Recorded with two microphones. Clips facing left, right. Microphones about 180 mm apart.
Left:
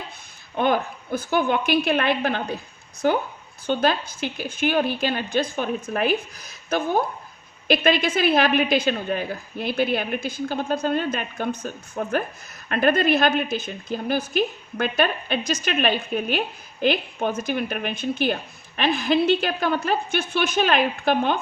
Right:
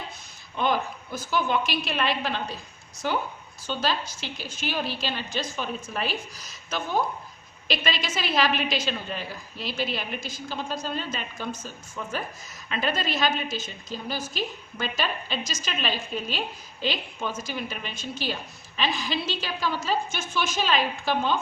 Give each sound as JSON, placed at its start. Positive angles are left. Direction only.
{"t": 0.5, "sound": "a woman's voice", "side_deg": 55}
{"t": 3.7, "sound": "a woman's voice", "side_deg": 55}